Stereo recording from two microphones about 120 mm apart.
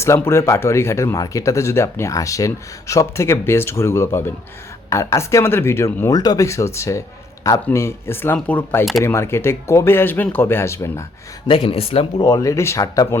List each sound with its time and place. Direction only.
0.0 s speech: 20° left (ahead or behind)
11.4 s speech: 50° left (ahead or behind)
12.3 s speech: 25° left (ahead or behind)